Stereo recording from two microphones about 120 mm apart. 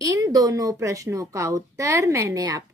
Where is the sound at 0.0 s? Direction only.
30° right (ahead or behind).